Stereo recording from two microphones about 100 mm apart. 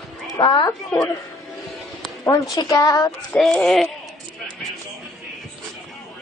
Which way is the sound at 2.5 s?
40° left (ahead or behind).